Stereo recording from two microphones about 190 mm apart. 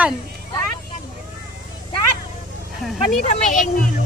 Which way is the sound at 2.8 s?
Centre (ahead or behind).